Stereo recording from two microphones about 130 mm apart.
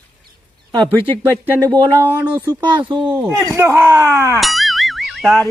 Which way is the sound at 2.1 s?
15° right (ahead or behind).